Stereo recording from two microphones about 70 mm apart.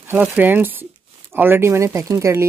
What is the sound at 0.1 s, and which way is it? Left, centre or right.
Speech, right.